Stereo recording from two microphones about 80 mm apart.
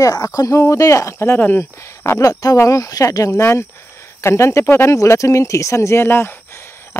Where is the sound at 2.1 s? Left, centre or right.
Left.